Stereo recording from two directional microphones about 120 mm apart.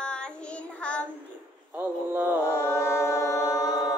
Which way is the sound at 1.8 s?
15° right (ahead or behind).